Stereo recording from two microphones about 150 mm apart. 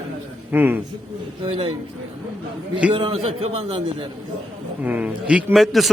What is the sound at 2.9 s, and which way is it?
Speech, 40° right (ahead or behind).